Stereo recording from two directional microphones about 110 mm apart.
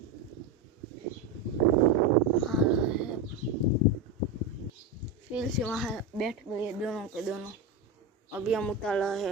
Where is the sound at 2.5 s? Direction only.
5° right (ahead or behind).